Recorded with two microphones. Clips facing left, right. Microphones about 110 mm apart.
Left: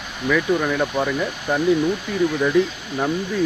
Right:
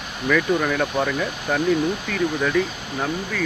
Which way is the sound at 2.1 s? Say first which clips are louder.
Left 4 dB; 15° left (ahead or behind).